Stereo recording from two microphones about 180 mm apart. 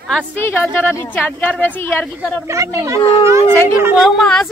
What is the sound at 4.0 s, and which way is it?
Speech, centre (ahead or behind).